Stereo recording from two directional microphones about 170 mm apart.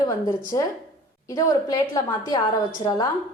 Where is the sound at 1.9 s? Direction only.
20° left (ahead or behind).